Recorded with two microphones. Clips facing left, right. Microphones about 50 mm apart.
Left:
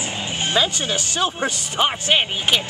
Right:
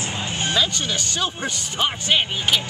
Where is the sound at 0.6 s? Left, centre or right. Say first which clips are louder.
Left 3 dB; left.